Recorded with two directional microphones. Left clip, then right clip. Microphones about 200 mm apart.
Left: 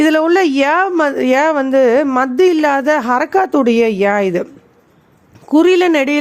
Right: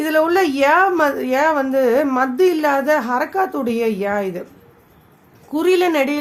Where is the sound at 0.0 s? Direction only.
40° left (ahead or behind).